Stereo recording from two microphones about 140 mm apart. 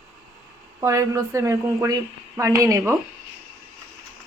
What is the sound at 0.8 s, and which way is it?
A woman's voice, 20° right (ahead or behind).